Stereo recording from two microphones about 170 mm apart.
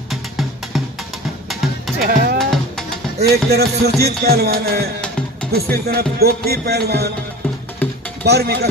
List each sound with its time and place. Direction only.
0.1 s music: centre (ahead or behind)
2.0 s speech: 60° right (ahead or behind)
3.2 s music: 70° right (ahead or behind)
5.5 s speech: 65° right (ahead or behind)
6.1 s music: 65° right (ahead or behind)
8.2 s speech: 70° right (ahead or behind)